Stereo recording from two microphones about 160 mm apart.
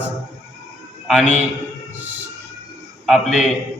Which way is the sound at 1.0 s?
Centre (ahead or behind).